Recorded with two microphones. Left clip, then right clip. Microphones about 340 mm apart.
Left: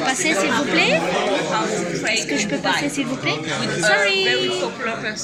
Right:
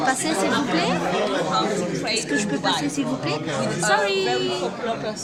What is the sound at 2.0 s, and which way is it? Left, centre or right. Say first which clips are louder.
A woman's voice: left 3 dB; centre.